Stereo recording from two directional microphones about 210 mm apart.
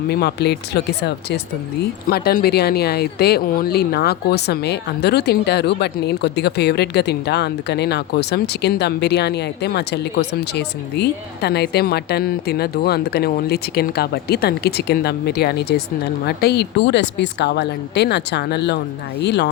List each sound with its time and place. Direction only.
0.1 s speech: 50° left (ahead or behind)